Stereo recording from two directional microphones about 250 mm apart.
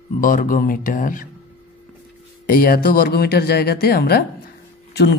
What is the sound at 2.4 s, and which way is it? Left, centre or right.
Speech, left.